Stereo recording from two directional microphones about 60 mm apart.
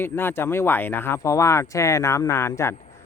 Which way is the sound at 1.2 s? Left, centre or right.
Left.